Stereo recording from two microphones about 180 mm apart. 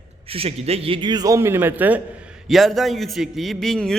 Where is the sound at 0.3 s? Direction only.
35° right (ahead or behind).